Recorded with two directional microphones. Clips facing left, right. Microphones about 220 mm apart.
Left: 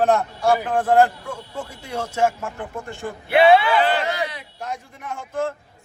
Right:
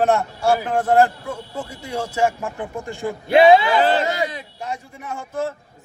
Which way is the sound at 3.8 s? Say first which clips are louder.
Right 3 dB; 40° right (ahead or behind).